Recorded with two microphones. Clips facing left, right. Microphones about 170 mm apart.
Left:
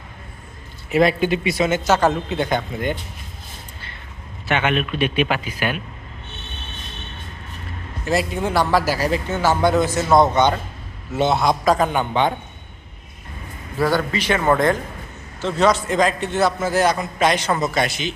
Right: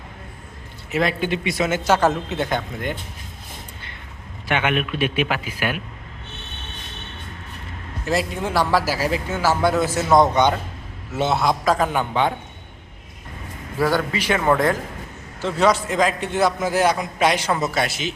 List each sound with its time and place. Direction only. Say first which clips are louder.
0.9 s a man's voice: left 5 dB; 30° left (ahead or behind)
1.2 s speech: left 3 dB; 10° left (ahead or behind)
1.5 s a man's voice: right 2 dB; 5° right (ahead or behind)
4.4 s a man's voice: left 1 dB; 10° right (ahead or behind)
8.0 s a man's voice: left 2 dB; centre (ahead or behind)
11.1 s a man's voice: left 2 dB; 5° right (ahead or behind)
13.8 s a man's voice: left 1 dB; 10° right (ahead or behind)